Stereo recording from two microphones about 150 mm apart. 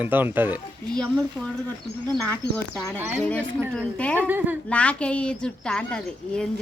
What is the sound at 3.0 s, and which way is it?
Speech, 15° right (ahead or behind).